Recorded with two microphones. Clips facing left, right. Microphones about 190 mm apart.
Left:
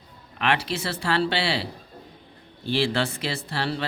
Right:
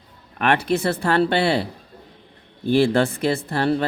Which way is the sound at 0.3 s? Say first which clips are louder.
Right 6 dB; 50° right (ahead or behind).